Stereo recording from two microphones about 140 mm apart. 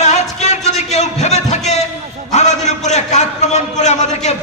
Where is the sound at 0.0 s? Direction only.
55° left (ahead or behind).